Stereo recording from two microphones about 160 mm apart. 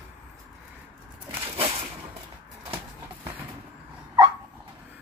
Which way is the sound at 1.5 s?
40° right (ahead or behind).